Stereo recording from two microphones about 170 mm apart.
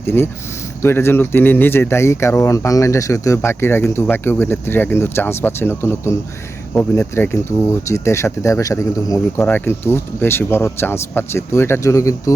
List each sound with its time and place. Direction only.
0.0 s speech: 15° left (ahead or behind)